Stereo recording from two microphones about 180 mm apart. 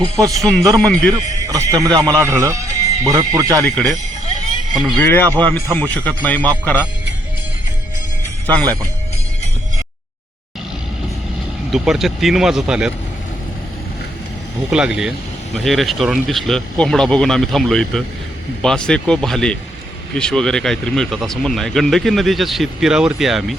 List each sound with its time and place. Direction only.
0.0 s a man's voice: 20° right (ahead or behind)
0.9 s speech: 5° left (ahead or behind)
1.1 s a man's voice: 20° right (ahead or behind)
3.6 s speech: 5° left (ahead or behind)
4.9 s speech: 10° left (ahead or behind)
8.6 s a man's voice: 20° right (ahead or behind)
11.7 s speech: centre (ahead or behind)
14.7 s speech: 5° right (ahead or behind)